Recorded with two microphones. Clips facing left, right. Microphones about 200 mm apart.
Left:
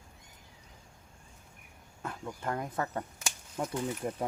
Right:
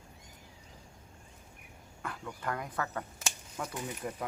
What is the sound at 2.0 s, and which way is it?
Speech, 25° left (ahead or behind).